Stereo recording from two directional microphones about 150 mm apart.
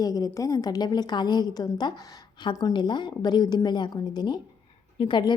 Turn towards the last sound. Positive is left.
turn(degrees=30)  # may be behind; listen again after turning